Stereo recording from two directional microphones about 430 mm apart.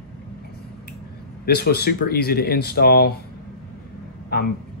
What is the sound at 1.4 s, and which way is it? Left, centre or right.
Speech, left.